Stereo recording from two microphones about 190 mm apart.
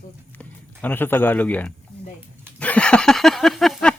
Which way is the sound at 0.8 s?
10° left (ahead or behind).